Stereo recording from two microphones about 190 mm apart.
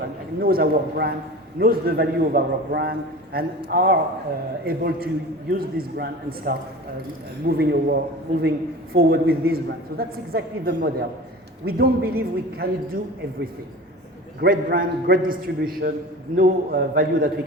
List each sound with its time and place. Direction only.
0.3 s a man's voice: 50° right (ahead or behind)
14.4 s a man's voice: 50° right (ahead or behind)